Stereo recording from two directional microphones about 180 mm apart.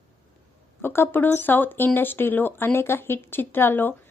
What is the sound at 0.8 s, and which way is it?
Speech, 10° left (ahead or behind).